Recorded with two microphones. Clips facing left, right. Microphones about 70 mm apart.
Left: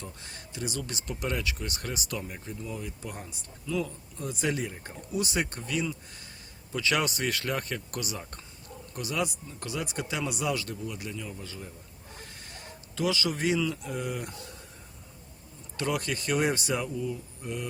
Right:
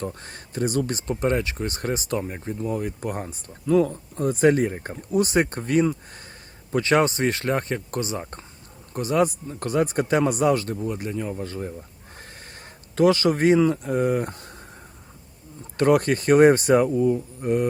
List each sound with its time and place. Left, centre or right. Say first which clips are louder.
0.0 s speech: right 11 dB; right
15.8 s speech: right 12 dB; right